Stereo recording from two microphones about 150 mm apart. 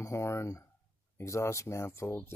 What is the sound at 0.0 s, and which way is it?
Speech, 20° left (ahead or behind).